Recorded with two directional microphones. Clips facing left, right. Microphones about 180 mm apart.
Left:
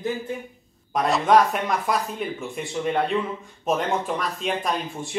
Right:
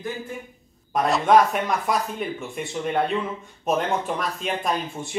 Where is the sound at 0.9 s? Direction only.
Centre (ahead or behind).